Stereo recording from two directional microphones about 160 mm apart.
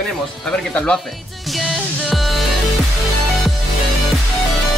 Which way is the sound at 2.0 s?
Centre (ahead or behind).